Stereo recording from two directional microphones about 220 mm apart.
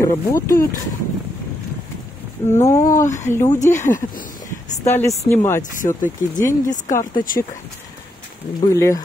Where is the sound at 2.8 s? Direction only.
35° left (ahead or behind).